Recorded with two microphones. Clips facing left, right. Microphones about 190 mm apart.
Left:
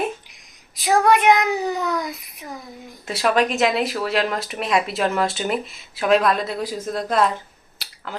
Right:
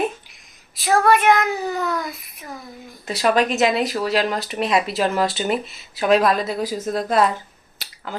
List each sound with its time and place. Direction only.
0.8 s a child's voice: 15° left (ahead or behind)
3.1 s speech: centre (ahead or behind)
7.8 s a sound: centre (ahead or behind)